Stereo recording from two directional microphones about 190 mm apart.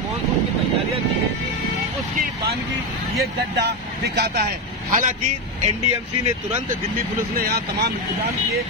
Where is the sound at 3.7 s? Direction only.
60° right (ahead or behind).